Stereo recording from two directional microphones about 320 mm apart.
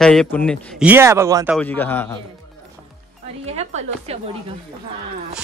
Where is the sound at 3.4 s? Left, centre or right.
Centre.